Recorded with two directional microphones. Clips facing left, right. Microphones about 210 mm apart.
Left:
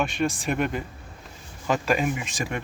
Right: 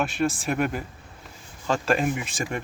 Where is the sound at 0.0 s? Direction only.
Centre (ahead or behind).